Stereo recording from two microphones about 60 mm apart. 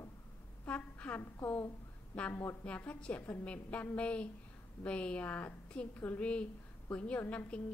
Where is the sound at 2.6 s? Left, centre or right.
Left.